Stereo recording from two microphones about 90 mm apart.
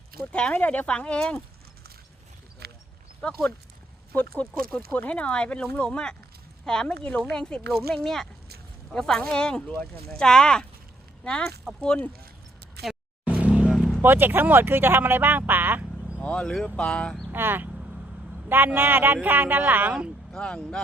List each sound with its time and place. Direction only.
0.3 s speech: 10° left (ahead or behind)
3.2 s speech: 10° left (ahead or behind)
13.2 s vehicle: 15° right (ahead or behind)
14.0 s speech: 25° right (ahead or behind)
16.2 s speech: 10° left (ahead or behind)
17.2 s speech: 25° right (ahead or behind)
20.3 s speech: 10° left (ahead or behind)